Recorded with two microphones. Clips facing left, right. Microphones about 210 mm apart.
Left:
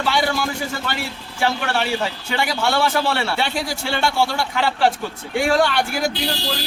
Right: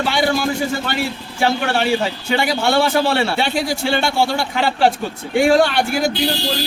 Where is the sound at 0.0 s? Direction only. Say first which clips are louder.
Right 3 dB; 25° right (ahead or behind).